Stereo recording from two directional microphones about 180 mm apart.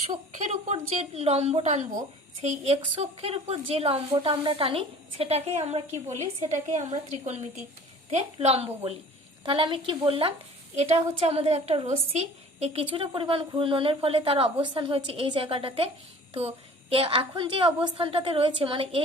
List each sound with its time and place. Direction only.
0.3 s a woman's voice: 40° right (ahead or behind)
16.9 s a woman's voice: 30° right (ahead or behind)